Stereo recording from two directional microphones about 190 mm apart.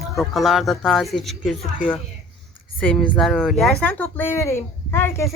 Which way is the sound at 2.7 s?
5° left (ahead or behind).